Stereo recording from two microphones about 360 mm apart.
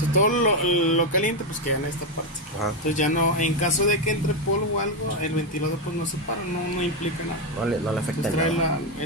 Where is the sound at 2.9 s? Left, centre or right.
Left.